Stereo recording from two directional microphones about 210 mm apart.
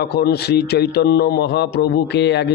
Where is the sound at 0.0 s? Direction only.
50° left (ahead or behind).